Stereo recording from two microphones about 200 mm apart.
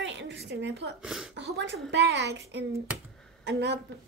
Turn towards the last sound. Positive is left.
turn(degrees=-60)  # may be behind; listen again after turning